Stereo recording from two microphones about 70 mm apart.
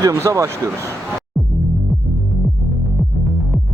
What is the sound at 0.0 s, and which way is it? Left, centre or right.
Speech, right.